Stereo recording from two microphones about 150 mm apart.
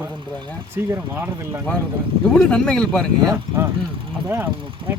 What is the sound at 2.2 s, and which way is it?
Speech, 5° left (ahead or behind).